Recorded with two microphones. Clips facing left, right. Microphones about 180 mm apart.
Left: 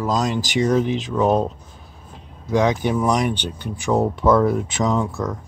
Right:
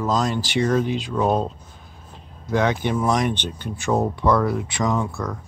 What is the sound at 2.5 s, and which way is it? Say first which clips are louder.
Speech: left 2 dB; 15° left (ahead or behind).